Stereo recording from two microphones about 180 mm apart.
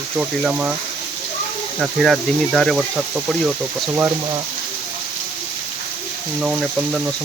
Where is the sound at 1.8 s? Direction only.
Centre (ahead or behind).